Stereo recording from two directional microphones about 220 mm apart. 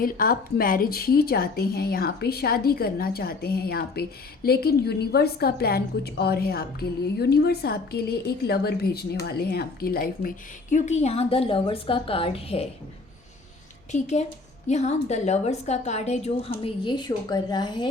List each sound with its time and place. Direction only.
0.0 s a woman's voice: 40° left (ahead or behind)
13.9 s a woman's voice: 30° left (ahead or behind)